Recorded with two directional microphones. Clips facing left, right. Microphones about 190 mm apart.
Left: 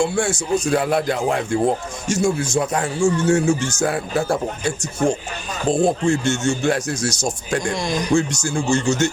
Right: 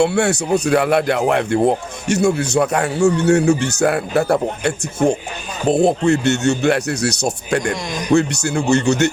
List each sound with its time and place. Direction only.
0.0 s speech: 65° right (ahead or behind)